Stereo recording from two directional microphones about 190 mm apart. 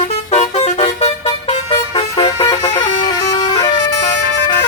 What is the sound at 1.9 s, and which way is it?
Vehicle, 25° left (ahead or behind).